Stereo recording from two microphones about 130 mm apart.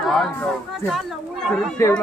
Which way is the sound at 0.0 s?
Centre (ahead or behind).